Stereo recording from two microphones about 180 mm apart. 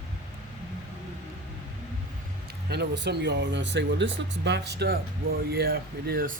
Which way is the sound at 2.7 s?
70° right (ahead or behind).